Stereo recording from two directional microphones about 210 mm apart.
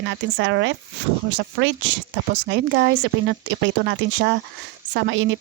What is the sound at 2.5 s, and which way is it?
Speech, 55° right (ahead or behind).